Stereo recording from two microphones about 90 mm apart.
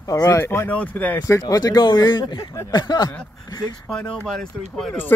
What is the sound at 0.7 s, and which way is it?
Speech, 15° left (ahead or behind).